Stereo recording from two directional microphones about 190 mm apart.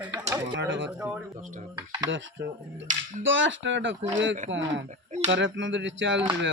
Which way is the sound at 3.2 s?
80° right.